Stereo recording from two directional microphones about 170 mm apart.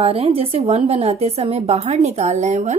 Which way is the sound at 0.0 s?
35° right (ahead or behind).